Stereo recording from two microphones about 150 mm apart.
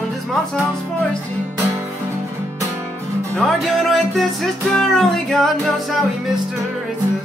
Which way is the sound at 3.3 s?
Centre (ahead or behind).